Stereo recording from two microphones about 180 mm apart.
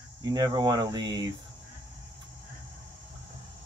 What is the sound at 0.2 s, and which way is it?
Speech, 20° right (ahead or behind).